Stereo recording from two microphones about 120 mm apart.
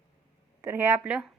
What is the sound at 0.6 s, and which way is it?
Speech, 20° right (ahead or behind).